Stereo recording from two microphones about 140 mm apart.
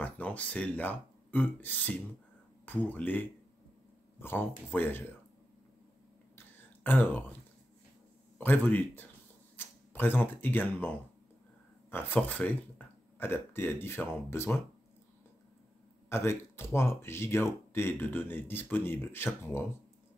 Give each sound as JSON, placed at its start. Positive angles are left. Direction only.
{"t": 0.0, "sound": "speech", "side_deg": 10}
{"t": 6.3, "sound": "a sound", "side_deg": 15}
{"t": 8.4, "sound": "speech", "side_deg": 15}
{"t": 11.9, "sound": "speech", "side_deg": 10}
{"t": 16.1, "sound": "speech", "side_deg": 15}